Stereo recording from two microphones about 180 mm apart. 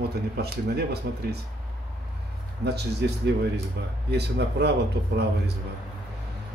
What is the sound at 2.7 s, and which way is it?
A man's voice, 65° right (ahead or behind).